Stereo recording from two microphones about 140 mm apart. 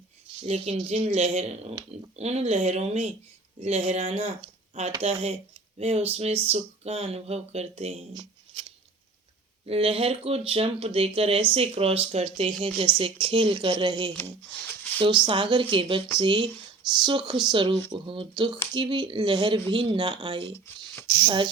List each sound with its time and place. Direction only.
0.4 s speech: 50° right (ahead or behind)
8.1 s shuffling cards: 35° right (ahead or behind)
9.6 s speech: 45° right (ahead or behind)
14.2 s speech: 15° left (ahead or behind)
14.9 s speech: 40° right (ahead or behind)
20.5 s speech: 15° left (ahead or behind)